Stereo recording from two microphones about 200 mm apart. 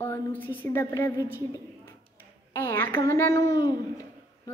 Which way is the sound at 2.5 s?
10° left (ahead or behind).